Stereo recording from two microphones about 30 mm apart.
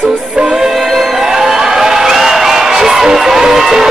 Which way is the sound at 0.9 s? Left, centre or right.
Centre.